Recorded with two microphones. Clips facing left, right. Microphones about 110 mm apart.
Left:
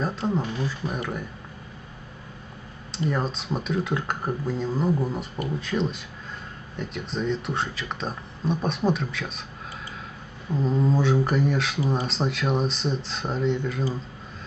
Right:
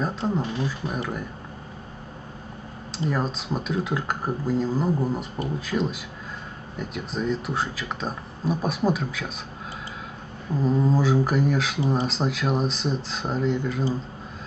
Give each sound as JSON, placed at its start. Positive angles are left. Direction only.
{"t": 0.3, "sound": "speech", "side_deg": 0}
{"t": 2.9, "sound": "speech", "side_deg": 0}
{"t": 10.5, "sound": "speech", "side_deg": -5}